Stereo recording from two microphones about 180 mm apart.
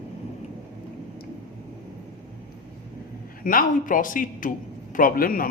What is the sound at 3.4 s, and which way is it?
A man's voice, 50° left (ahead or behind).